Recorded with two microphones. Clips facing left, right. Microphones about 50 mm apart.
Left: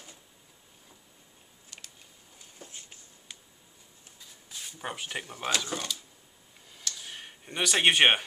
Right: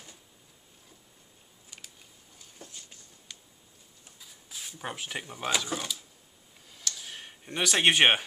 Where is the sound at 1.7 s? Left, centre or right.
Centre.